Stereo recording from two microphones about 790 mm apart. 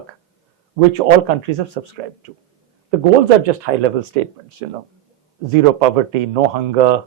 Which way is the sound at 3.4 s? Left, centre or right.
Right.